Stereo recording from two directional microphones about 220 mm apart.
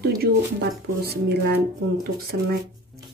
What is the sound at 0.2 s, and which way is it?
Speech, 45° right (ahead or behind).